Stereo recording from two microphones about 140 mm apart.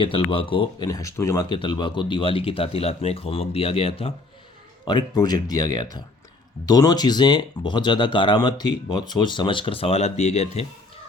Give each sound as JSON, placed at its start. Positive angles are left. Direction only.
{"t": 0.0, "sound": "speech", "side_deg": 40}
{"t": 1.5, "sound": "speech", "side_deg": 35}
{"t": 4.9, "sound": "speech", "side_deg": 30}